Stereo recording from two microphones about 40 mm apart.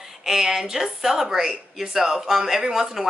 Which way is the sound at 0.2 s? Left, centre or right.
Centre.